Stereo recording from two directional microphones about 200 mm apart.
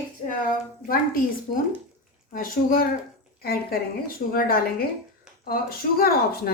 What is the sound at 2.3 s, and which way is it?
Speech, 45° left (ahead or behind).